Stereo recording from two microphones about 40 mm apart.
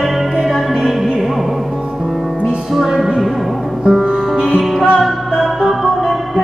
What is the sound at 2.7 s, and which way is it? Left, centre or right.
Music, centre.